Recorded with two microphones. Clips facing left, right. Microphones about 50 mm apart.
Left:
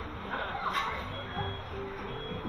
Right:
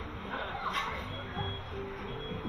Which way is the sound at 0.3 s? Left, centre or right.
Left.